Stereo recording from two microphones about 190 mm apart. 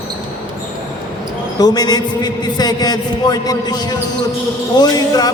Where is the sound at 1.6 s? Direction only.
20° left (ahead or behind).